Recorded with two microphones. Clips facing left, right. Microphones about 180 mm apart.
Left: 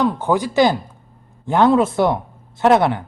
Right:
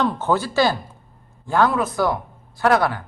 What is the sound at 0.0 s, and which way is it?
Speech, 15° left (ahead or behind).